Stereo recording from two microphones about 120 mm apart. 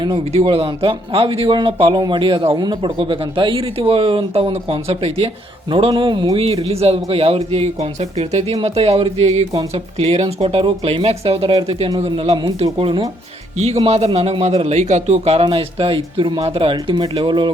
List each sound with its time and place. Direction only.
0.3 s speech: 50° right (ahead or behind)
6.4 s a man's voice: 55° right (ahead or behind)
12.5 s a man's voice: 60° right (ahead or behind)
15.4 s speech: 45° right (ahead or behind)